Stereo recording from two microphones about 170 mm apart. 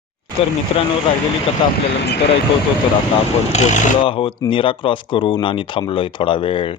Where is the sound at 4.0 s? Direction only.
30° left (ahead or behind).